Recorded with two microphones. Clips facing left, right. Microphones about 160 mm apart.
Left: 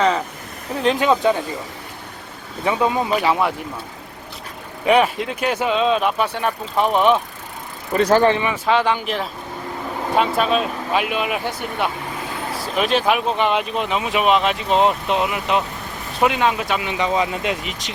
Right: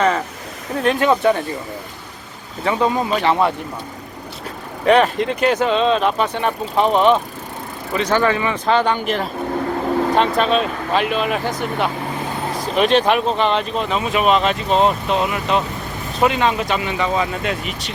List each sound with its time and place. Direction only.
0.8 s speech: 20° left (ahead or behind)
2.6 s speech: 10° left (ahead or behind)
4.9 s speech: 5° left (ahead or behind)
7.9 s speech: 35° left (ahead or behind)
8.4 s speech: 5° left (ahead or behind)
12.7 s speech: centre (ahead or behind); by 17.7 s 20° left (ahead or behind)